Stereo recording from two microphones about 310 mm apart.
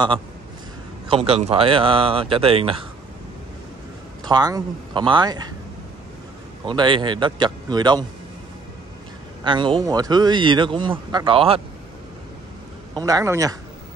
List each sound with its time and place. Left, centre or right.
1.0 s speech: centre
4.2 s speech: centre
6.6 s speech: centre
9.4 s speech: centre
13.0 s speech: centre